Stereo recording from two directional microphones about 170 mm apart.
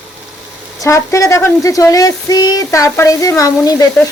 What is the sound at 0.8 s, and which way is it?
Speech, 20° left (ahead or behind).